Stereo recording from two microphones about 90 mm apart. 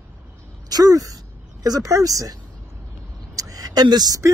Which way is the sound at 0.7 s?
45° right (ahead or behind).